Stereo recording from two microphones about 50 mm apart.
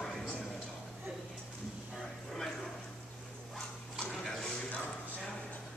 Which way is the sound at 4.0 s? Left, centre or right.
Centre.